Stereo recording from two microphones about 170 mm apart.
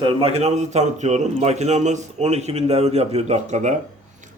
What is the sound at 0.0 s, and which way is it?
A man's voice, 30° right (ahead or behind).